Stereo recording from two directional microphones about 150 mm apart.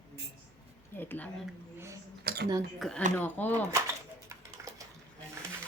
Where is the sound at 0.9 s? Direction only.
15° left (ahead or behind).